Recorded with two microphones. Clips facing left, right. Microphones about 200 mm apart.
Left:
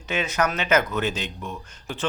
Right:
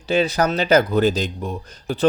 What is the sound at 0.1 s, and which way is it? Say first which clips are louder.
Speech: right 6 dB; 35° right (ahead or behind).